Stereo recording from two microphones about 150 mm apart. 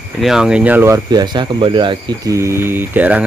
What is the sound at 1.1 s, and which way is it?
Speech, 30° right (ahead or behind).